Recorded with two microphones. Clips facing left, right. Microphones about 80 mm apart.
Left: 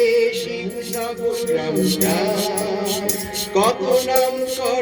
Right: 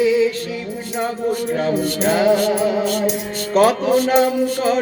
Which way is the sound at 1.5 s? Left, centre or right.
Right.